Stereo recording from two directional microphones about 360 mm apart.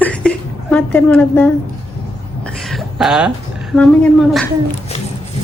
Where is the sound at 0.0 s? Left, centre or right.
Centre.